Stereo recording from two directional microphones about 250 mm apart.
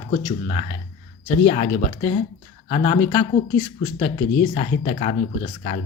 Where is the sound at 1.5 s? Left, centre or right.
Left.